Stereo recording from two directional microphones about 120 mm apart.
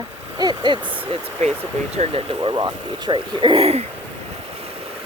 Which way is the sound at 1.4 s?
65° right (ahead or behind).